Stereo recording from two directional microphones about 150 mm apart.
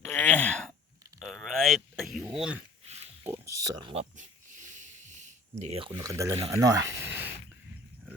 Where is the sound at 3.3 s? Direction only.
20° right (ahead or behind).